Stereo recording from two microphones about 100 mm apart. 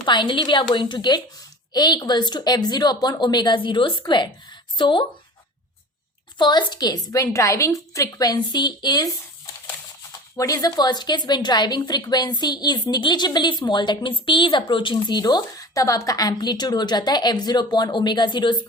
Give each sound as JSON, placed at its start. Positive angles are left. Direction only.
{"t": 0.0, "sound": "a woman's voice", "side_deg": 50}
{"t": 6.4, "sound": "a woman's voice", "side_deg": 50}
{"t": 10.3, "sound": "a woman's voice", "side_deg": 35}
{"t": 14.9, "sound": "a woman's voice", "side_deg": 40}